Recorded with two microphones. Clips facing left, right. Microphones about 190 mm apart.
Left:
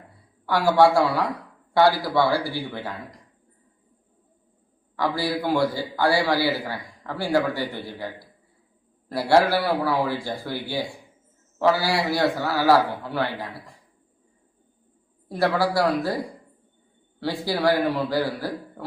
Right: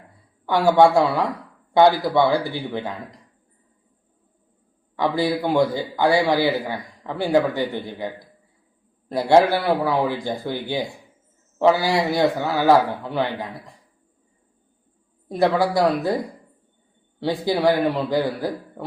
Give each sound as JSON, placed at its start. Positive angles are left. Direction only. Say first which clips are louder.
{"t": 0.4, "sound": "a man's voice", "louder": "right 2 dB", "side_deg": -20}
{"t": 4.9, "sound": "a man's voice", "louder": "right 4 dB", "side_deg": -20}
{"t": 15.3, "sound": "a man's voice", "louder": "right 3 dB", "side_deg": -20}
{"t": 17.2, "sound": "a man's voice", "louder": "right 3 dB", "side_deg": -20}